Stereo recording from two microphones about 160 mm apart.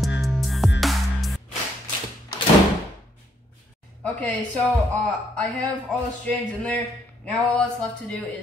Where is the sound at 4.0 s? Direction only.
10° left (ahead or behind).